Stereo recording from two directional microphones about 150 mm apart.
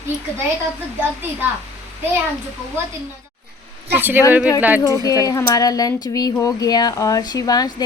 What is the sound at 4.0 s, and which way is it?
Speech, 15° right (ahead or behind).